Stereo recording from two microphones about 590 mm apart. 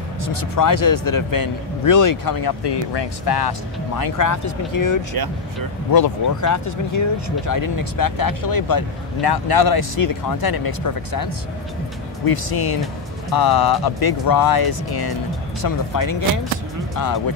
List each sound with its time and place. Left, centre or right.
0.3 s speech: left
5.1 s speech: right
5.9 s speech: left